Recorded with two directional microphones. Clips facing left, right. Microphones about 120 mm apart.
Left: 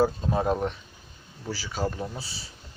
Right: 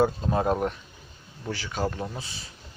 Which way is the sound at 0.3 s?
5° right (ahead or behind).